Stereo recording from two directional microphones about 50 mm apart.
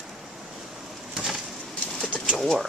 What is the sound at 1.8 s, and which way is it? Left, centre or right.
Bird, centre.